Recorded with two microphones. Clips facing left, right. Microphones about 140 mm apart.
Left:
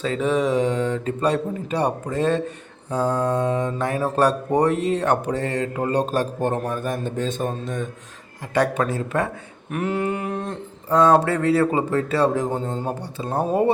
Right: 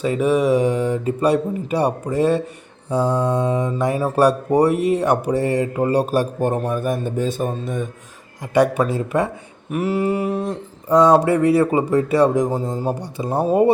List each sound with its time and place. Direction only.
0.0 s speech: 10° right (ahead or behind)